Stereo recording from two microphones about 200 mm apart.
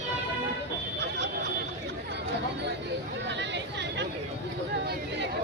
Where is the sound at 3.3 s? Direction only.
60° right (ahead or behind).